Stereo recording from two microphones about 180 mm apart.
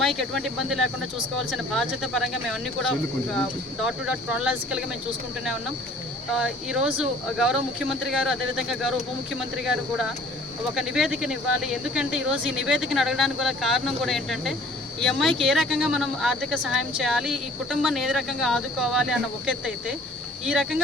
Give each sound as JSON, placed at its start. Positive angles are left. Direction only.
{"t": 0.0, "sound": "speech", "side_deg": 0}
{"t": 3.8, "sound": "speech", "side_deg": -5}
{"t": 6.3, "sound": "speech", "side_deg": -5}
{"t": 20.5, "sound": "speech", "side_deg": 0}